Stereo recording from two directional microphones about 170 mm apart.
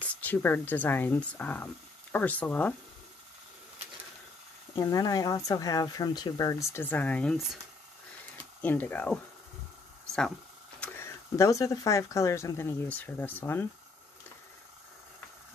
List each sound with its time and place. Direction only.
0.1 s speech: 10° left (ahead or behind)
4.7 s speech: 20° left (ahead or behind)
8.6 s speech: 10° left (ahead or behind)
10.8 s speech: 10° left (ahead or behind)